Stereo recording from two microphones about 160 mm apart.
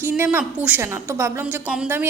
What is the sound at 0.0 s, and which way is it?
A woman's voice, 15° right (ahead or behind).